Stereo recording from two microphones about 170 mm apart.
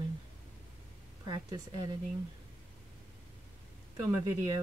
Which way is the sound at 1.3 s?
25° right (ahead or behind).